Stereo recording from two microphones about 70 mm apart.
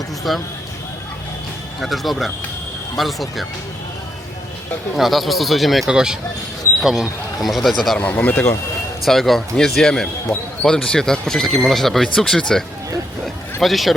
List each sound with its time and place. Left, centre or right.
0.3 s speech: centre
1.8 s speech: centre
4.9 s speech: centre
7.8 s speech: centre
8.1 s speech: left
9.0 s speech: centre